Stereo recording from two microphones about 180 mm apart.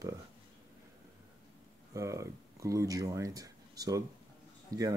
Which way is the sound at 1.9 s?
15° right (ahead or behind).